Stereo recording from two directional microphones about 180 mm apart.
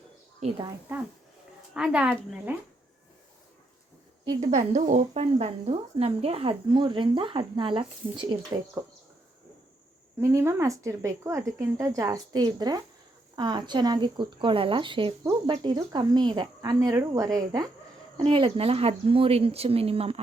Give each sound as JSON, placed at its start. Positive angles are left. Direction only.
{"t": 0.3, "sound": "speech", "side_deg": -30}
{"t": 1.7, "sound": "speech", "side_deg": -5}
{"t": 4.4, "sound": "speech", "side_deg": -40}
{"t": 10.2, "sound": "speech", "side_deg": -15}